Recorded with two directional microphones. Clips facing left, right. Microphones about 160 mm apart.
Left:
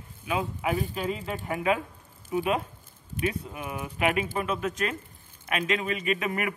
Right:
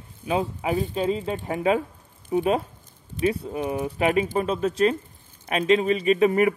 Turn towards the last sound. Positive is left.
turn(degrees=-35)  # may be behind; listen again after turning